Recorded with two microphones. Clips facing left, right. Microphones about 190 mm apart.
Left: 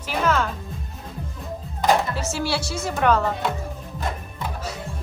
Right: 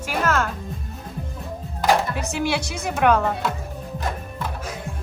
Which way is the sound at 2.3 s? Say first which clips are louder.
Right 3 dB; 15° right (ahead or behind).